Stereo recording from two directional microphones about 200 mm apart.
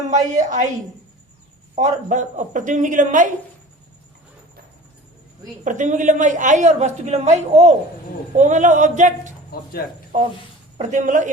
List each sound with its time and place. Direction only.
0.1 s a woman's voice: 35° right (ahead or behind)
1.7 s a woman's voice: 35° right (ahead or behind)
5.6 s a woman's voice: 40° right (ahead or behind)
9.5 s speech: 50° left (ahead or behind)
10.8 s a woman's voice: 35° right (ahead or behind)